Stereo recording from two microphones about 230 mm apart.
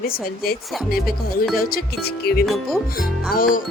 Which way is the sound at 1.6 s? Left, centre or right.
Left.